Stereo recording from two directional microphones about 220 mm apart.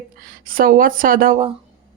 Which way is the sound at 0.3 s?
40° right (ahead or behind).